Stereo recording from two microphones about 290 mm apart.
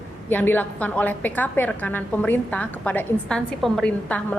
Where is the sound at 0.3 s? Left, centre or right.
Centre.